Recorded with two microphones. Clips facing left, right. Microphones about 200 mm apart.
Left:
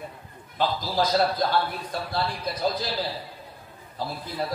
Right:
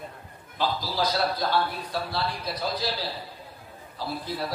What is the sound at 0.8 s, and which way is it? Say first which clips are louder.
Speech: left 6 dB; 50° left (ahead or behind).